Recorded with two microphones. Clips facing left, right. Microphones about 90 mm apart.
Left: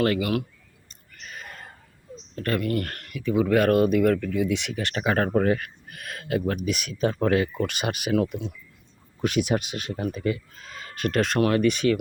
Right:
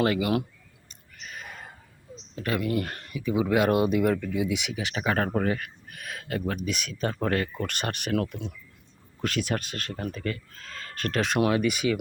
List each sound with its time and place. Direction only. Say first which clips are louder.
0.0 s speech: left 1 dB; 20° right (ahead or behind)
1.1 s a sound: even; centre (ahead or behind)
2.3 s speech: left 2 dB; 10° right (ahead or behind)
9.2 s speech: left 5 dB; 15° left (ahead or behind)
11.3 s speech: left 2 dB; 10° right (ahead or behind)